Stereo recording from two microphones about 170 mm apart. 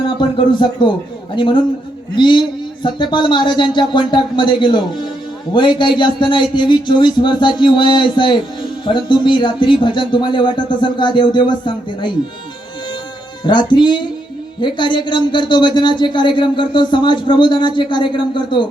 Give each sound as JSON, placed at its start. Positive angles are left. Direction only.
{"t": 0.2, "sound": "speech", "side_deg": 30}
{"t": 13.4, "sound": "speech", "side_deg": 25}